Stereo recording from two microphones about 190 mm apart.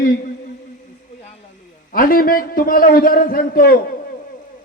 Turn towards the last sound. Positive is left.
turn(degrees=50)  # may be behind; listen again after turning